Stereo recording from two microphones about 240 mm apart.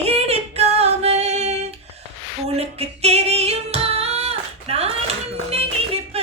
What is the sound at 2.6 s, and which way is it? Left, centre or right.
Singing, right.